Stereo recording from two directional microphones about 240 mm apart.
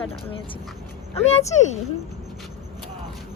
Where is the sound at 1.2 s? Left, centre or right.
Left.